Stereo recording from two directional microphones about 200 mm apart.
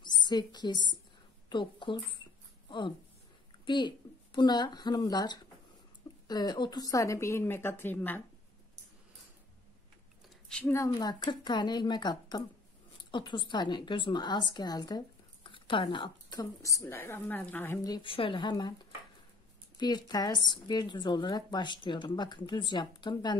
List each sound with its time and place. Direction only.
0.0 s a woman's voice: 20° left (ahead or behind)
3.6 s a woman's voice: 20° left (ahead or behind)
10.5 s a woman's voice: 10° left (ahead or behind)
19.8 s a woman's voice: 20° left (ahead or behind)